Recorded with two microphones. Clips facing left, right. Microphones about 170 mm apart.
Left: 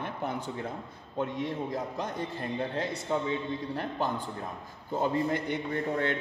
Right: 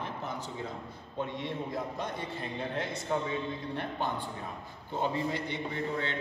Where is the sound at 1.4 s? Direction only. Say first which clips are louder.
Left 3 dB; 40° left (ahead or behind).